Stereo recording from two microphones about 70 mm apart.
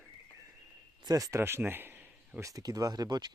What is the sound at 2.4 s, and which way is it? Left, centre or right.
Speech, right.